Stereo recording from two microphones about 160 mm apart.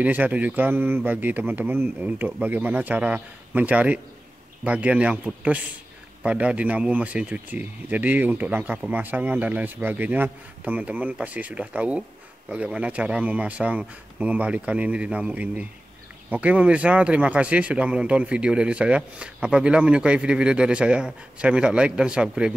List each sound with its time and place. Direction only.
0.0 s speech: 10° right (ahead or behind)